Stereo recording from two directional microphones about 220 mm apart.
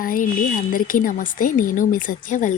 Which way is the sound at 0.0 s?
40° left (ahead or behind).